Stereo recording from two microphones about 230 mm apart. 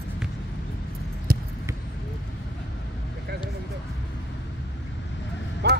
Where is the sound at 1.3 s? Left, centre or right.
Right.